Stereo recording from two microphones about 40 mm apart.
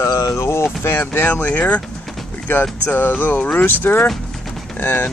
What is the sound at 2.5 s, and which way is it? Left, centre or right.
Speech, left.